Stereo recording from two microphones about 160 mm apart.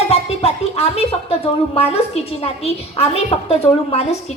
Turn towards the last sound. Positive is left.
turn(degrees=40)  # may be behind; listen again after turning